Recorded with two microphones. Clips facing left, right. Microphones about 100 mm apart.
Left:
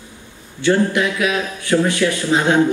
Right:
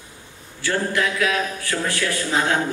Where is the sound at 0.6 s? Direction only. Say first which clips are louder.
Left 6 dB; 20° left (ahead or behind).